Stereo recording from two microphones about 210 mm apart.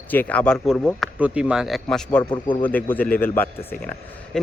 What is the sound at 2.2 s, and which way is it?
Speech, 20° left (ahead or behind).